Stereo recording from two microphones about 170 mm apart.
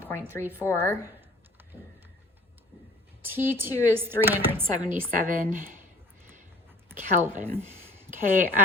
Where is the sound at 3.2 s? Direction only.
10° right (ahead or behind).